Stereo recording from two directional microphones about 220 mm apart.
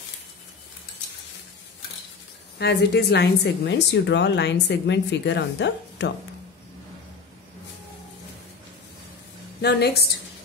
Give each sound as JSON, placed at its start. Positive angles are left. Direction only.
{"t": 2.6, "sound": "speech", "side_deg": 50}
{"t": 9.6, "sound": "speech", "side_deg": 50}